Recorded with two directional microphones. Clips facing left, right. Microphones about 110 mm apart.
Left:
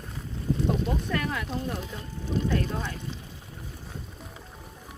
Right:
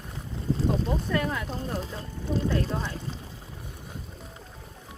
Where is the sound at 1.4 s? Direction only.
35° right (ahead or behind).